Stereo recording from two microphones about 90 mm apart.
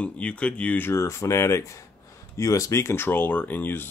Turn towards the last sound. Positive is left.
turn(degrees=20)  # may be behind; listen again after turning